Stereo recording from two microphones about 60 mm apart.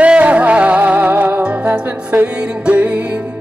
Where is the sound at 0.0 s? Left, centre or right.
Right.